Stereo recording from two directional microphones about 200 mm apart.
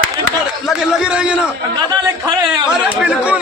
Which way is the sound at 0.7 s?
5° right (ahead or behind).